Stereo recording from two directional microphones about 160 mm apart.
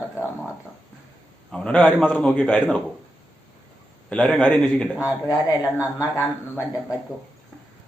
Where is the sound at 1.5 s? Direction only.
5° left (ahead or behind).